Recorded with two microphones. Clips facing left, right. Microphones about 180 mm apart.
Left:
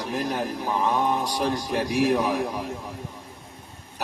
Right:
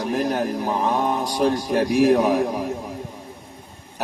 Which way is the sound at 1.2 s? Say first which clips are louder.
Right 5 dB; 45° right (ahead or behind).